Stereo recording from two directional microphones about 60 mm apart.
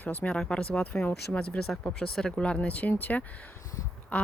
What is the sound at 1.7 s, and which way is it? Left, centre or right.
Speech, centre.